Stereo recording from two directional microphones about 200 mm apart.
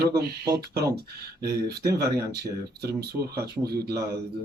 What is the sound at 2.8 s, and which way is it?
Speech, 50° right (ahead or behind).